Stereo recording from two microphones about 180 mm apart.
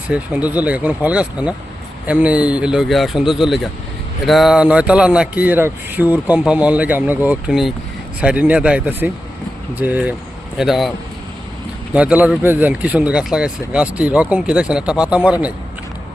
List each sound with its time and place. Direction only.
0.1 s speech: 10° right (ahead or behind)
11.9 s speech: 5° right (ahead or behind)